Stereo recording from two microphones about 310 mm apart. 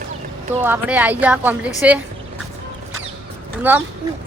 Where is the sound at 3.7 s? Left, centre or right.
Centre.